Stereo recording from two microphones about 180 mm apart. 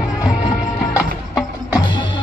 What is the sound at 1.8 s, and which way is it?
Music, 25° left (ahead or behind).